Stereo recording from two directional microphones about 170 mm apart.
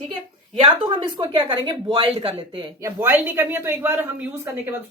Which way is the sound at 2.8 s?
10° right (ahead or behind).